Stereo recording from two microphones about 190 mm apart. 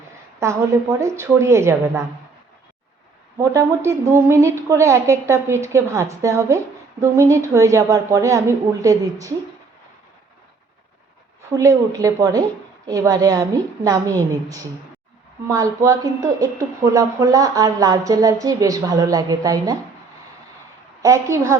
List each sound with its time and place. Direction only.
0.3 s speech: 15° right (ahead or behind)
3.3 s speech: 15° right (ahead or behind)
11.5 s a woman's voice: 15° right (ahead or behind)
21.0 s speech: 15° right (ahead or behind)